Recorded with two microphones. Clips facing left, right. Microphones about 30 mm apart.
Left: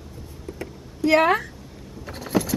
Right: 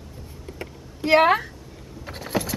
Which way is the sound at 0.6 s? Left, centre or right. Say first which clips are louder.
Left 5 dB; right.